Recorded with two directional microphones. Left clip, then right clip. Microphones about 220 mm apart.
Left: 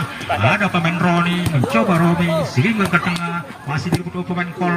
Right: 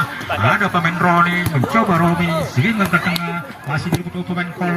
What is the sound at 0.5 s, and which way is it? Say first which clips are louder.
Speech: right 2 dB; 35° left (ahead or behind).